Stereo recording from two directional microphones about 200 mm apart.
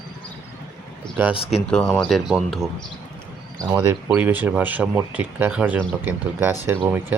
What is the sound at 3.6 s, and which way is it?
Speech, 15° right (ahead or behind).